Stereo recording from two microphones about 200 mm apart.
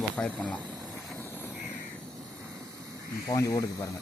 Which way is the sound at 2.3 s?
15° right (ahead or behind).